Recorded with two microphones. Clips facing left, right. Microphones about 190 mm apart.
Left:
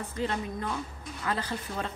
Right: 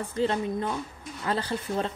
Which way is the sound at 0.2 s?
30° right (ahead or behind).